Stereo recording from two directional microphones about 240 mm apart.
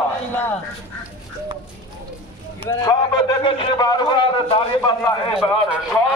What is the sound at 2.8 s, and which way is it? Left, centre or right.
A man's voice, centre.